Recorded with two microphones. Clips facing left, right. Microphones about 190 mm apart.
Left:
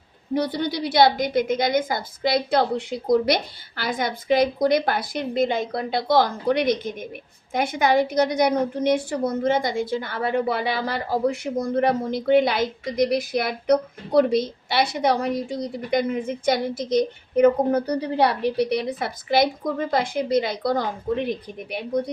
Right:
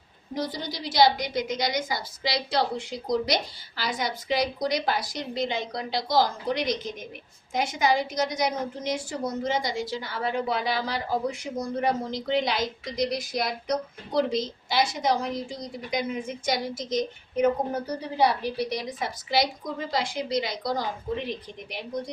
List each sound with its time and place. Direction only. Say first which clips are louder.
0.3 s a woman's voice: left 8 dB; 60° left (ahead or behind)